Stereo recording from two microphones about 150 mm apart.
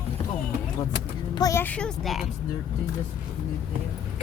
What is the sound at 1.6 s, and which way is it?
Speech, 10° left (ahead or behind).